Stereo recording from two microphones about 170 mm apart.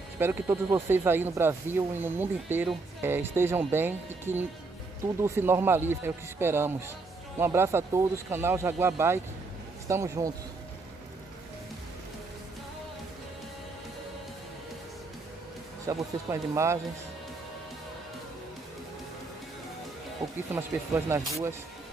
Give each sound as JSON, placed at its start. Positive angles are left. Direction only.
{"t": 0.2, "sound": "speech", "side_deg": -15}
{"t": 15.9, "sound": "speech", "side_deg": -15}
{"t": 20.5, "sound": "speech", "side_deg": -15}